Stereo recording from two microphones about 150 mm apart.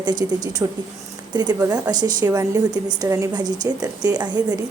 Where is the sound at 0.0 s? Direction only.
30° right (ahead or behind).